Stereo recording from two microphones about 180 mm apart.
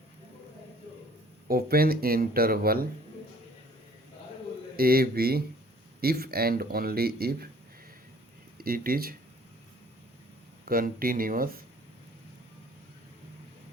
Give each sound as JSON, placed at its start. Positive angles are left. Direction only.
{"t": 1.5, "sound": "speech", "side_deg": -55}
{"t": 4.8, "sound": "speech", "side_deg": -55}
{"t": 8.5, "sound": "speech", "side_deg": -55}
{"t": 10.7, "sound": "speech", "side_deg": -55}